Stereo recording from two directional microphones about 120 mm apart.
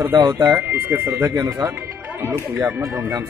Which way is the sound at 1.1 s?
30° right (ahead or behind).